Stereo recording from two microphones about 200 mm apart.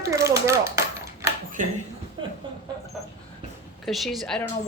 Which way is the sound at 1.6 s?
40° right (ahead or behind).